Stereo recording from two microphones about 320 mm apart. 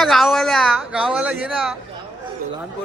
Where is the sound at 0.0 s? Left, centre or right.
Centre.